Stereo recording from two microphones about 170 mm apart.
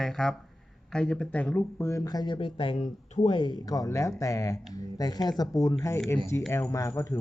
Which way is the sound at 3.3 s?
30° left (ahead or behind).